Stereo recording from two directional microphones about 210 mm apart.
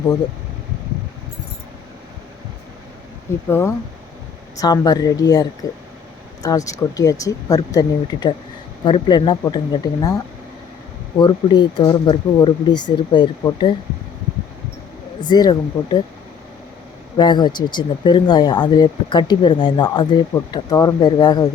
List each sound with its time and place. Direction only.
3.5 s speech: 10° left (ahead or behind)
11.2 s speech: 20° left (ahead or behind)
15.2 s speech: 20° left (ahead or behind)
17.2 s speech: 20° left (ahead or behind)